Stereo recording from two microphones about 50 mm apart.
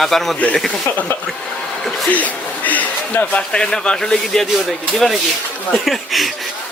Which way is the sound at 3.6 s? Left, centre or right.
Centre.